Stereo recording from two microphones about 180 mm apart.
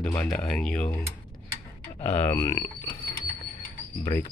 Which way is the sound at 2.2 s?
15° left (ahead or behind).